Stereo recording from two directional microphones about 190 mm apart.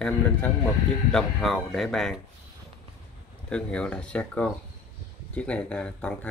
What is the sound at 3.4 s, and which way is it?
Speech, 5° left (ahead or behind).